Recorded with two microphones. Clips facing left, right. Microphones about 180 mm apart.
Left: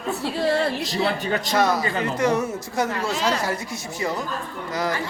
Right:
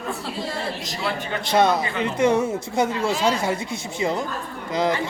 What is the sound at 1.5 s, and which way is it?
Speech, 25° right (ahead or behind).